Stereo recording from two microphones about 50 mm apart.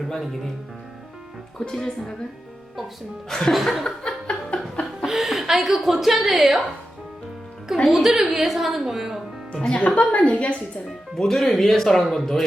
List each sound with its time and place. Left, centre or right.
0.1 s a woman's voice: centre
1.7 s speech: centre
3.2 s a woman's voice: centre
3.8 s a sound: centre
5.0 s a woman's voice: centre
7.9 s a woman's voice: centre
9.5 s a woman's voice: centre
11.2 s speech: centre